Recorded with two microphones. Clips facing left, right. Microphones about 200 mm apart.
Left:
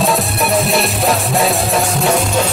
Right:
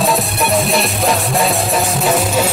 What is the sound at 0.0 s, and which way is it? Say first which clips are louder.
Music: even; centre (ahead or behind).